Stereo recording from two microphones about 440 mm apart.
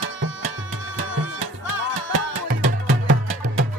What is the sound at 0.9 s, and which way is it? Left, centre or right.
Music, right.